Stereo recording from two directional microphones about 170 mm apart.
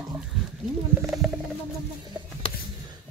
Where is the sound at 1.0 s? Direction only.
5° right (ahead or behind).